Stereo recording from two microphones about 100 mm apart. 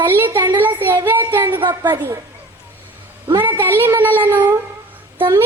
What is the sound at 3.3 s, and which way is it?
A child's voice, 20° right (ahead or behind).